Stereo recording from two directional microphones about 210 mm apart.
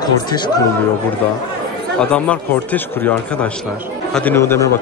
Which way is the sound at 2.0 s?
5° left (ahead or behind).